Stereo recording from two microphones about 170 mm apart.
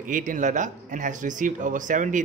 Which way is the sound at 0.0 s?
50° right (ahead or behind).